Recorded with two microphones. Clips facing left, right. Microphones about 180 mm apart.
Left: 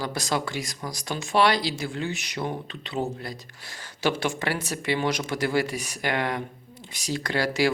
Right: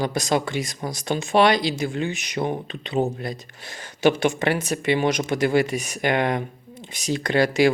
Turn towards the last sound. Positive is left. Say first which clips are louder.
# right 6 dB
turn(degrees=-20)  # may be behind; listen again after turning